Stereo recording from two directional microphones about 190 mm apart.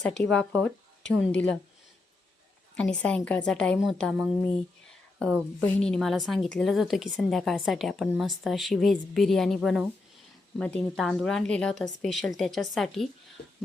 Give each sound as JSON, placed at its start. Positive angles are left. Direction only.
{"t": 0.0, "sound": "a woman's voice", "side_deg": 5}
{"t": 1.0, "sound": "speech", "side_deg": 75}
{"t": 3.0, "sound": "a woman's voice", "side_deg": 5}